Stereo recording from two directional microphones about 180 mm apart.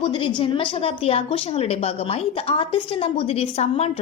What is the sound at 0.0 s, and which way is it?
A woman's voice, 30° left (ahead or behind).